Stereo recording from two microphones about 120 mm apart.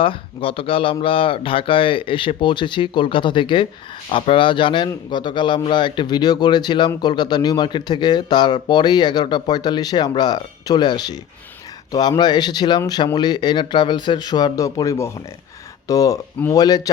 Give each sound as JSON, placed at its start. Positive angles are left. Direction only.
{"t": 0.0, "sound": "a man's voice", "side_deg": 50}